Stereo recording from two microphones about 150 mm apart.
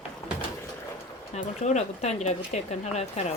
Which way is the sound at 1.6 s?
50° left (ahead or behind).